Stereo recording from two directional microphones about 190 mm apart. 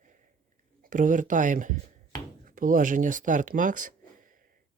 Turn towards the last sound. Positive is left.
turn(degrees=-45)  # may be behind; listen again after turning